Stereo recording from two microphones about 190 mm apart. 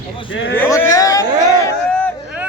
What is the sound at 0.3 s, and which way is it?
Speech, 80° left.